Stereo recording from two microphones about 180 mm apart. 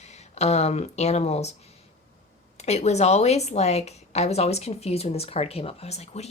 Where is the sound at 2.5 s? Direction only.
40° left (ahead or behind).